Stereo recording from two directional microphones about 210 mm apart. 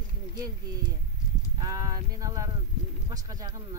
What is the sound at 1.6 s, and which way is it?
Speech, 15° right (ahead or behind).